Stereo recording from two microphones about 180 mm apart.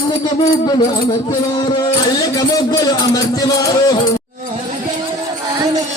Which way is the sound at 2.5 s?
20° left (ahead or behind).